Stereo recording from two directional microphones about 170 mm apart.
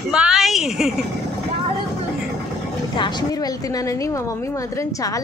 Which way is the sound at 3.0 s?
25° left (ahead or behind).